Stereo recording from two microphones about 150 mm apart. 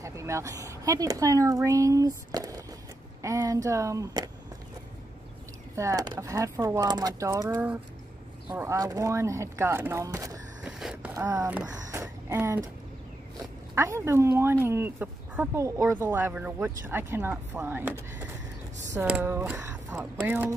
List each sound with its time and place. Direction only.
0.0 s speech: 20° right (ahead or behind)
5.8 s speech: 25° right (ahead or behind)
8.5 s speech: 20° right (ahead or behind)
10.6 s a sound: 5° right (ahead or behind)
11.1 s speech: 20° right (ahead or behind)
13.7 s speech: 20° right (ahead or behind)
19.6 s a sound: 20° right (ahead or behind)
20.2 s speech: 15° right (ahead or behind)